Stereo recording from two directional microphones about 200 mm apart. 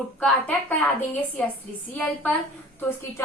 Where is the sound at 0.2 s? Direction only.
5° left (ahead or behind).